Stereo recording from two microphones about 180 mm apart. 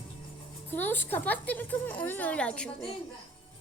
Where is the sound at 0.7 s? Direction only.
10° left (ahead or behind).